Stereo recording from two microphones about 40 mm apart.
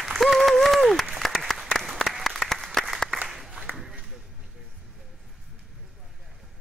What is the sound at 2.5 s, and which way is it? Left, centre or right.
Applause, centre.